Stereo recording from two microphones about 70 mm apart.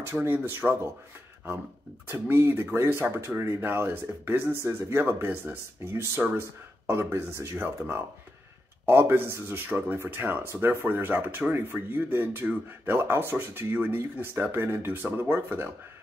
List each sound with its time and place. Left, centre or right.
0.0 s speech: right
2.0 s speech: right
7.5 s speech: right